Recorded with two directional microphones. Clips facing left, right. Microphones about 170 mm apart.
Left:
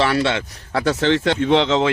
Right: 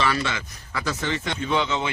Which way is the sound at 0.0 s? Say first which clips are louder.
Left 7 dB; 65° left (ahead or behind).